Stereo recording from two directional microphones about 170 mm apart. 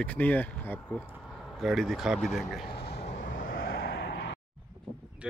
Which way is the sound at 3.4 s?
65° left (ahead or behind).